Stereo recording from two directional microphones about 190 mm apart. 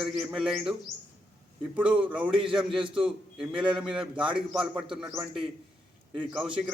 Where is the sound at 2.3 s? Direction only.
25° right (ahead or behind).